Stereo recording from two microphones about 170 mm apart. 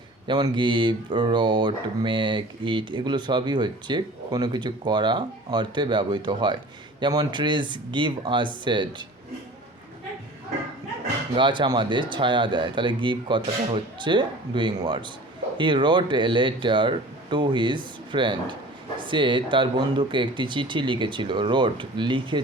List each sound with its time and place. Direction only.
0.3 s speech: 25° right (ahead or behind)
11.3 s speech: 30° right (ahead or behind)